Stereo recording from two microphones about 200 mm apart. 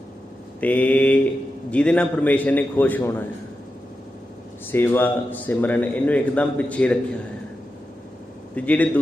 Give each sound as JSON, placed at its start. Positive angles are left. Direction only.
{"t": 0.6, "sound": "a man's voice", "side_deg": 5}
{"t": 4.7, "sound": "a man's voice", "side_deg": 10}
{"t": 8.5, "sound": "a man's voice", "side_deg": 5}